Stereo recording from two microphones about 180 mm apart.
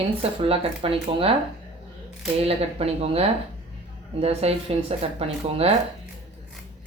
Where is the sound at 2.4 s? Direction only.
35° right (ahead or behind).